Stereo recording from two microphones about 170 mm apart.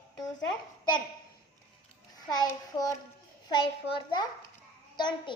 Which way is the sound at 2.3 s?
25° left (ahead or behind).